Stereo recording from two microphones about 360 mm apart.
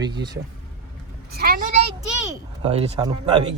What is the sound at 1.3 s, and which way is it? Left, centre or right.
Vehicle, right.